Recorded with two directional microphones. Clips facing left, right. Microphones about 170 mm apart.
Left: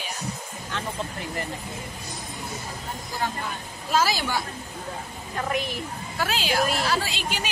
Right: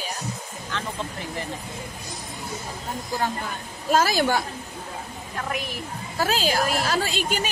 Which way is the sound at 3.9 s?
50° right (ahead or behind).